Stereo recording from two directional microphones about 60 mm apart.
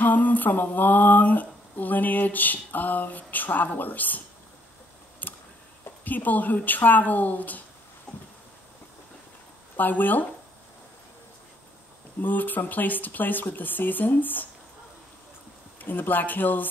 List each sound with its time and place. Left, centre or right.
0.0 s speech: left
5.2 s a sound: left
6.0 s speech: left
8.1 s a sound: centre
9.8 s speech: left
12.2 s speech: left
15.8 s speech: left